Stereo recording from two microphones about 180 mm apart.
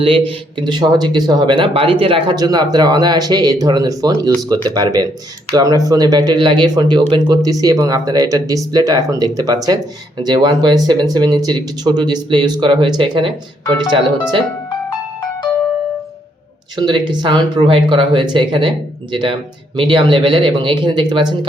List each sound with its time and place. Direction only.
0.0 s speech: 30° right (ahead or behind)
16.7 s speech: 25° right (ahead or behind)